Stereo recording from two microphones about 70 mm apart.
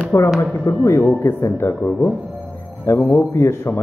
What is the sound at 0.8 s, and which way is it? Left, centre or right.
A man's voice, left.